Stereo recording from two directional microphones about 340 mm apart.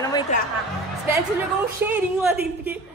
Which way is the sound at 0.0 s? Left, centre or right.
Centre.